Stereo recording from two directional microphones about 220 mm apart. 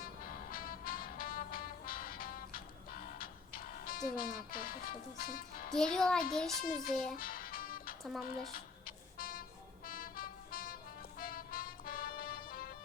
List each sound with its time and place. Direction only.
0.0 s music: 40° left (ahead or behind)
5.7 s a child's voice: centre (ahead or behind)
7.2 s music: 40° left (ahead or behind)
8.3 s speech: 40° left (ahead or behind)
9.1 s vehicle: 40° left (ahead or behind)
9.8 s music: 40° left (ahead or behind)